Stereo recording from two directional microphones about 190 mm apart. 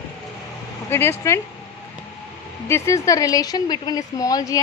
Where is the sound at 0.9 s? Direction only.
15° left (ahead or behind).